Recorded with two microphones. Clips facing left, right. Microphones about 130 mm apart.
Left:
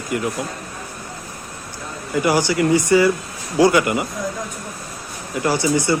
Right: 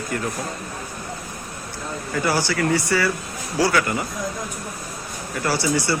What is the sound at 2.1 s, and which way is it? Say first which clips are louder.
Speech: left 5 dB; 15° left (ahead or behind).